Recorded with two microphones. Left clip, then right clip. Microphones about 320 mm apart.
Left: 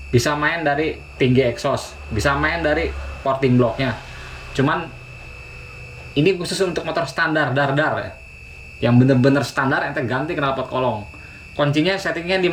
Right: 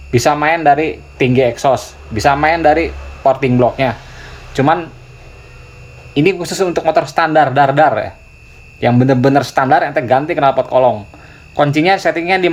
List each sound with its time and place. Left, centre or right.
0.1 s speech: centre
6.1 s speech: centre